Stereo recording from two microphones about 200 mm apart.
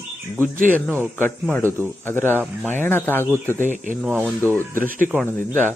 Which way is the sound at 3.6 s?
40° right (ahead or behind).